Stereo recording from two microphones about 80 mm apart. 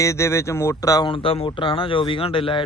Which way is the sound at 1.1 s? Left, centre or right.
Left.